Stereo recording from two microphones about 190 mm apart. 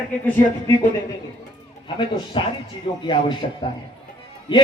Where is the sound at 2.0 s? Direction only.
25° left (ahead or behind).